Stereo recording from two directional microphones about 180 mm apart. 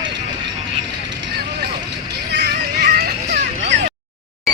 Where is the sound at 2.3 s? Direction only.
65° right (ahead or behind).